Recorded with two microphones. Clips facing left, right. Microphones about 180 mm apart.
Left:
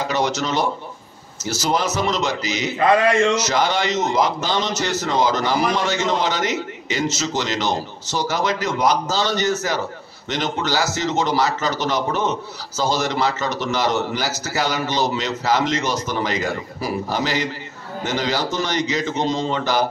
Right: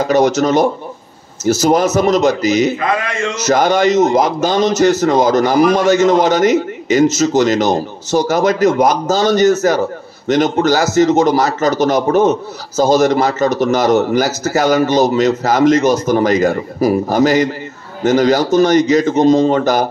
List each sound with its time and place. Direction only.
0.0 s a man's voice: 45° right (ahead or behind)